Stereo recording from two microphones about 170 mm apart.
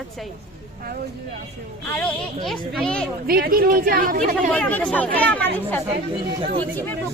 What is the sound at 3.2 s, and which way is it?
A woman's voice, 60° right (ahead or behind).